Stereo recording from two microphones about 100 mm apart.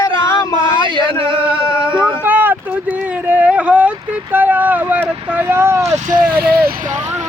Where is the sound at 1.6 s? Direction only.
60° right (ahead or behind).